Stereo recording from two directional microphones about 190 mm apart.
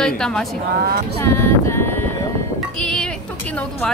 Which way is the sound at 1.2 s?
15° left (ahead or behind).